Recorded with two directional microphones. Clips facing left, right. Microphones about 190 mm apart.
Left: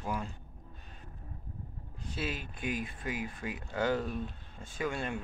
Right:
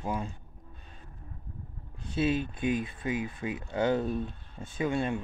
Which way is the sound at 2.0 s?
25° right (ahead or behind).